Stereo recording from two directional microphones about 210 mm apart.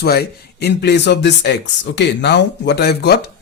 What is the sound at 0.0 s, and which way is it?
Speech, 50° left (ahead or behind).